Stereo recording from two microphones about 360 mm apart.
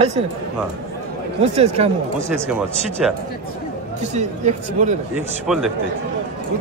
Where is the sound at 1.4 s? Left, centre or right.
Centre.